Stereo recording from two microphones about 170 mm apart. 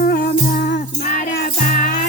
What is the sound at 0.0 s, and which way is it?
Music, 60° left (ahead or behind).